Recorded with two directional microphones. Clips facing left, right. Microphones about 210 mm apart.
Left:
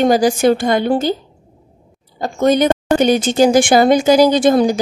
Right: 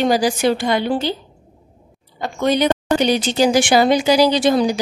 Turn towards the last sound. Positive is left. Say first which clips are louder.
# left 4 dB
turn(degrees=50)  # may be behind; listen again after turning